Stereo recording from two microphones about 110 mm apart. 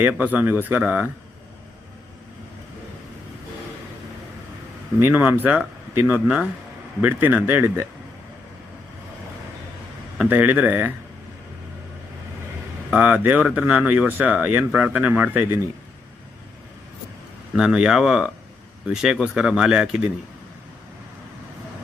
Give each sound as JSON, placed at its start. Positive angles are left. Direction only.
{"t": 0.0, "sound": "speech", "side_deg": -15}
{"t": 4.9, "sound": "speech", "side_deg": -20}
{"t": 10.2, "sound": "speech", "side_deg": -15}
{"t": 12.9, "sound": "speech", "side_deg": -15}
{"t": 17.5, "sound": "speech", "side_deg": -5}